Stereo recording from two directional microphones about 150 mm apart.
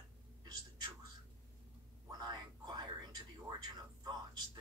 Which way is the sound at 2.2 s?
30° right (ahead or behind).